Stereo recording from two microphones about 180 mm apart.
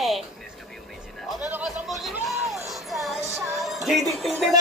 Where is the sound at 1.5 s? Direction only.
5° right (ahead or behind).